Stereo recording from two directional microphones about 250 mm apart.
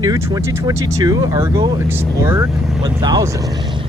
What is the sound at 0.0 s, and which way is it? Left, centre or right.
Speech, centre.